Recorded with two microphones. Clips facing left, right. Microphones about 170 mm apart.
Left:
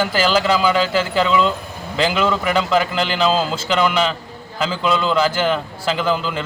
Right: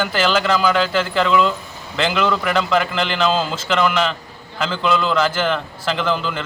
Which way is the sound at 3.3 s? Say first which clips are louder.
Left 1 dB; 30° left (ahead or behind).